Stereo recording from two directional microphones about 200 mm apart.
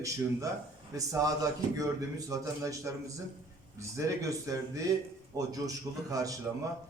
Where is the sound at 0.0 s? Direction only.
15° right (ahead or behind).